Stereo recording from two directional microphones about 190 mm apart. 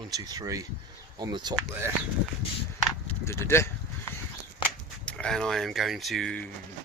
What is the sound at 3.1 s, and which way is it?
Speech, 15° left (ahead or behind).